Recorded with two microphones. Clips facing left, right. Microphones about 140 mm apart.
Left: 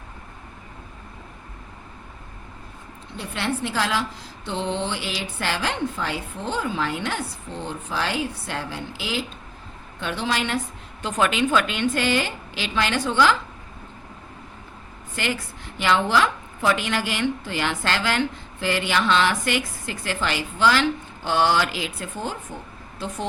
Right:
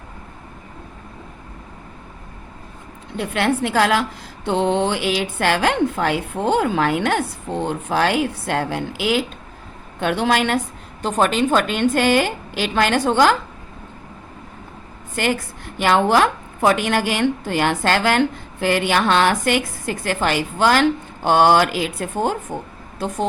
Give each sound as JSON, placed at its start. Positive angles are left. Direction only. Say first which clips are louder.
{"t": 3.2, "sound": "speech", "louder": "right 7 dB", "side_deg": -60}
{"t": 11.0, "sound": "a woman's voice", "louder": "right 4 dB", "side_deg": -40}
{"t": 15.1, "sound": "a woman's voice", "louder": "right 6 dB", "side_deg": -50}